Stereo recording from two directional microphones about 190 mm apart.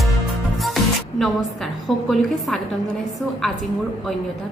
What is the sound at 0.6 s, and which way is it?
Music, centre (ahead or behind).